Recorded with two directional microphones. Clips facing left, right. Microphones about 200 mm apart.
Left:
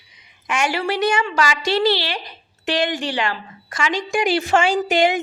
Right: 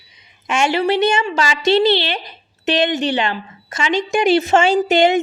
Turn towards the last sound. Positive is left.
turn(degrees=-25)  # may be behind; listen again after turning